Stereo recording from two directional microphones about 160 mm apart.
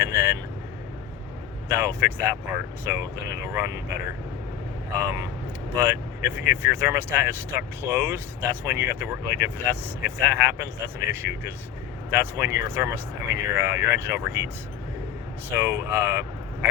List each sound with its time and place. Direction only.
0.0 s vehicle: 15° right (ahead or behind)
1.6 s speech: 15° right (ahead or behind)
5.7 s speech: 15° right (ahead or behind)
15.4 s speech: 15° right (ahead or behind)